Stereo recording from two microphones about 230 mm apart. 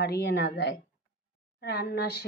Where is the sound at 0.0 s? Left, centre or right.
Left.